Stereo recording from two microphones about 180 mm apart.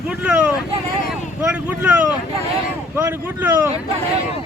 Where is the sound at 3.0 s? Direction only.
10° right (ahead or behind).